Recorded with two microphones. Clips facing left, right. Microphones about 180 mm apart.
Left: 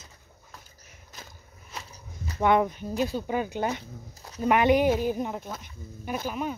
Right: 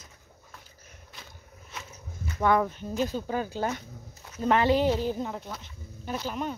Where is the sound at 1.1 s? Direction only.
40° left (ahead or behind).